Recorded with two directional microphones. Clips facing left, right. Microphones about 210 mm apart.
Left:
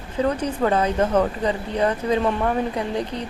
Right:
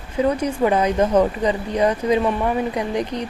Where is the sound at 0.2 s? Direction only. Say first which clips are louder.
Right 3 dB; 10° right (ahead or behind).